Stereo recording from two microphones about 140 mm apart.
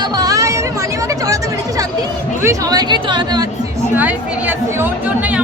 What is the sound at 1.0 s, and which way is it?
Chatter, 25° right (ahead or behind).